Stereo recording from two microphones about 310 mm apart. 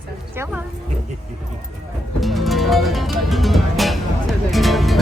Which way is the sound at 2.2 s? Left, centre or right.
Centre.